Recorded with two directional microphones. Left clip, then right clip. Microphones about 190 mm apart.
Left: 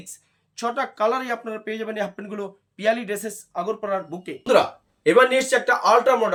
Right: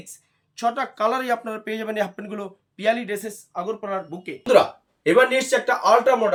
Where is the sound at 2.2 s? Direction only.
10° right (ahead or behind).